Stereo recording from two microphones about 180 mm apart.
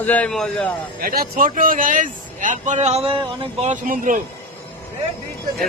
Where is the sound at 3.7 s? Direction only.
45° right (ahead or behind).